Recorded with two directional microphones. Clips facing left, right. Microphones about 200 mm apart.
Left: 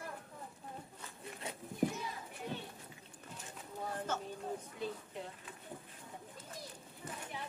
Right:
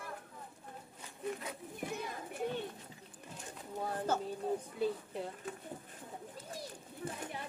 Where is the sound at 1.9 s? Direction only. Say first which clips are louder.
Right 2 dB; 55° right (ahead or behind).